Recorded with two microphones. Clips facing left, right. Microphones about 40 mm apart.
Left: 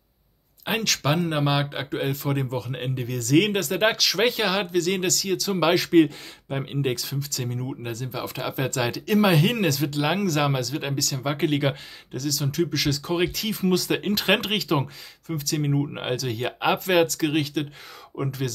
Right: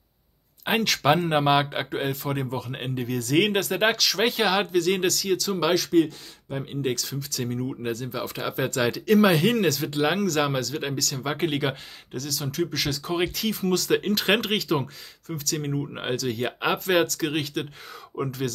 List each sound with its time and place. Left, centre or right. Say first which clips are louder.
0.7 s speech: right 2 dB; centre
1.0 s speech: right 4 dB; right; by 5.5 s centre
5.5 s speech: left 3 dB; centre
6.0 s speech: left 4 dB; left
6.8 s speech: even; centre
7.2 s speech: right 1 dB; centre